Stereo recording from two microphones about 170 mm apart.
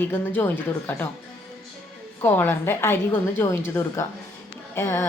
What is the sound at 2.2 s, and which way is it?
A woman's voice, 10° left (ahead or behind).